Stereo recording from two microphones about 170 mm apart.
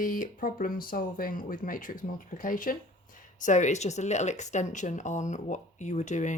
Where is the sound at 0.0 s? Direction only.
50° left (ahead or behind).